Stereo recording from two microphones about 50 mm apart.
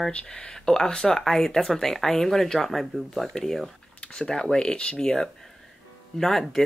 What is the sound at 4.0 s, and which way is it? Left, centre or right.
Speech, centre.